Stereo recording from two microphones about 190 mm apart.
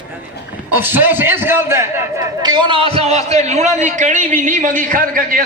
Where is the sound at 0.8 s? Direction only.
10° right (ahead or behind).